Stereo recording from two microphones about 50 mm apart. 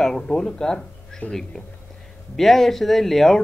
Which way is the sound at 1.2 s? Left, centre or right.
Left.